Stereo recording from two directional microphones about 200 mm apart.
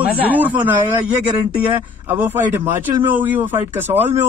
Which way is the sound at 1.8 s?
10° right (ahead or behind).